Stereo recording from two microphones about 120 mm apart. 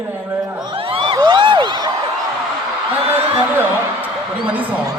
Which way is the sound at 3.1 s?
20° right (ahead or behind).